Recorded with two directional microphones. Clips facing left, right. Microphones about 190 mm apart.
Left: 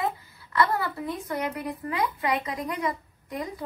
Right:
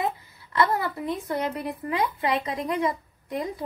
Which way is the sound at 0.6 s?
25° right (ahead or behind).